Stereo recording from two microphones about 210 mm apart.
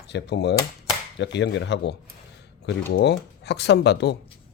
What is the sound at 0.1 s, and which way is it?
Speech, 55° left (ahead or behind).